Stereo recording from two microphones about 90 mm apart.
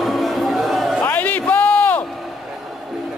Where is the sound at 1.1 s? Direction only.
20° left (ahead or behind).